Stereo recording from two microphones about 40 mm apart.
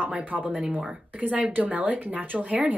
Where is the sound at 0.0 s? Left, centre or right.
Right.